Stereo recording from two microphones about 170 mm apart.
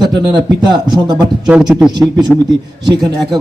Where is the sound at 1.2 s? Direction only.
5° right (ahead or behind).